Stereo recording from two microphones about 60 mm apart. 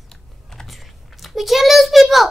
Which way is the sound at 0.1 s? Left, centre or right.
Centre.